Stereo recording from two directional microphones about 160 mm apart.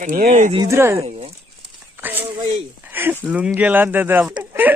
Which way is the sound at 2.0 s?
10° right (ahead or behind).